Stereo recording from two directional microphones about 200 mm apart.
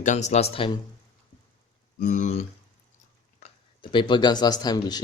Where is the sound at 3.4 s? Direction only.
35° left (ahead or behind).